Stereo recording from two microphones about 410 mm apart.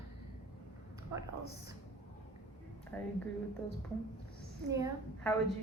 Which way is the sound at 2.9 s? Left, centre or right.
Centre.